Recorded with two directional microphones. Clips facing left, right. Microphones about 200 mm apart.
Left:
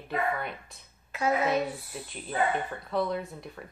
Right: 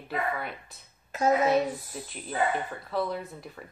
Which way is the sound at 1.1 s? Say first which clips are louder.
Right 3 dB; 45° right (ahead or behind).